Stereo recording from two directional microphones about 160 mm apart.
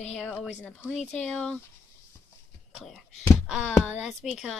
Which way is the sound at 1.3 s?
5° left (ahead or behind).